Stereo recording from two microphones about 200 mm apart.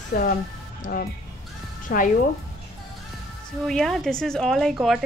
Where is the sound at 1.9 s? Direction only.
45° left (ahead or behind).